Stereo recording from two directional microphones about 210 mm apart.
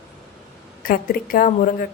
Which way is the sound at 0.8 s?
45° left (ahead or behind).